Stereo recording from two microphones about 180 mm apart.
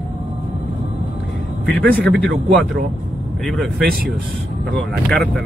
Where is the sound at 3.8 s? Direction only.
55° right (ahead or behind).